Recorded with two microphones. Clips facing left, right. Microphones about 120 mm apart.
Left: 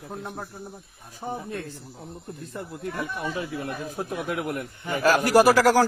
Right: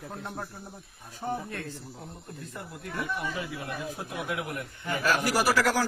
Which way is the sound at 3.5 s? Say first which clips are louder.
Left 4 dB; 45° left (ahead or behind).